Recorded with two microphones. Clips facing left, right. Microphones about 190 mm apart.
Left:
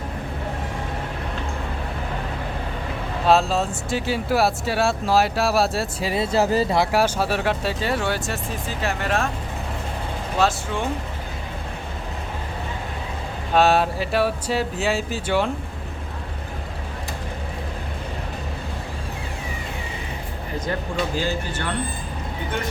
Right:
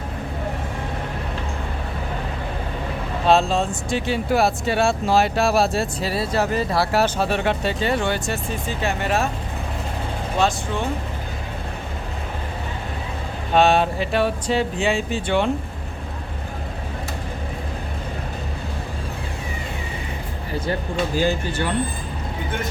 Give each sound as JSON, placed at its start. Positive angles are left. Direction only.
{"t": 3.2, "sound": "speech", "side_deg": 5}
{"t": 6.1, "sound": "speech", "side_deg": 20}
{"t": 6.7, "sound": "speech", "side_deg": 10}
{"t": 10.4, "sound": "speech", "side_deg": 5}
{"t": 13.5, "sound": "speech", "side_deg": 5}
{"t": 21.2, "sound": "speech", "side_deg": -10}